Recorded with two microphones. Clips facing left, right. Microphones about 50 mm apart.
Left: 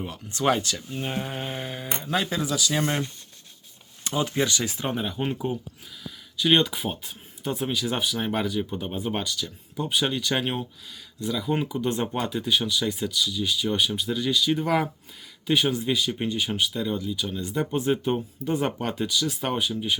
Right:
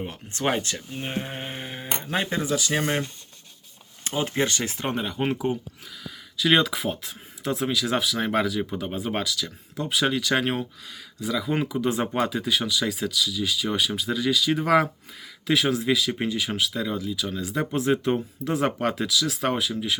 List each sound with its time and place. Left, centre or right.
0.0 s speech: right
0.9 s a sound: centre
2.0 s speech: right
4.0 s speech: right
6.3 s speech: right